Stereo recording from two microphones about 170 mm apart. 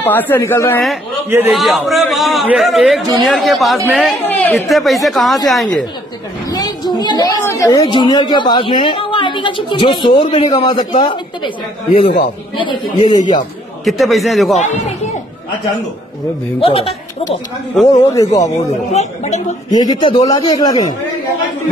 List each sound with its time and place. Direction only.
0.0 s speech: 10° left (ahead or behind)
1.5 s a man's voice: centre (ahead or behind)
4.2 s a sound: 10° left (ahead or behind)
4.6 s a man's voice: centre (ahead or behind)
6.5 s a sound: 25° left (ahead or behind)
7.8 s a woman's voice: 25° left (ahead or behind)
13.1 s a woman's voice: 30° left (ahead or behind)
13.8 s a man's voice: centre (ahead or behind)
14.6 s speech: 45° left (ahead or behind)
16.5 s speech: 35° left (ahead or behind)
17.9 s a woman's voice: 20° left (ahead or behind)
18.9 s speech: 40° left (ahead or behind)
19.7 s a woman's voice: 25° left (ahead or behind)